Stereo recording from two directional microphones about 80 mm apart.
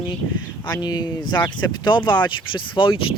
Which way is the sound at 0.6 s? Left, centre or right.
Left.